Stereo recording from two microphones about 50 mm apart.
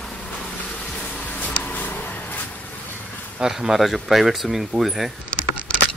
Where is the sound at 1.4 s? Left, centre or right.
Left.